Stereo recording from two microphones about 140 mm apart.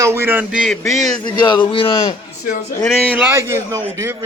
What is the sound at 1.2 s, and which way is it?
Speech, 35° left (ahead or behind).